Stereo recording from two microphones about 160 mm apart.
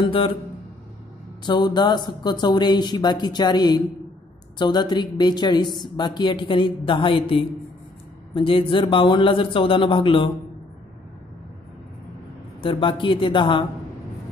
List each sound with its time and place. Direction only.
0.0 s speech: 35° left (ahead or behind)
1.4 s speech: 30° left (ahead or behind)
12.6 s speech: 30° left (ahead or behind)